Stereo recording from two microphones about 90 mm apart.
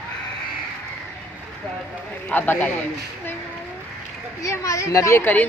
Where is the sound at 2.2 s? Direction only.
20° left (ahead or behind).